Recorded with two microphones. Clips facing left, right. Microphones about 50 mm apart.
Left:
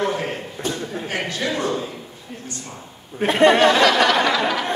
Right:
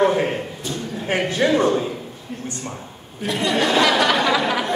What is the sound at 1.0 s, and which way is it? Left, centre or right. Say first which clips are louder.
Speech: right 7 dB; right.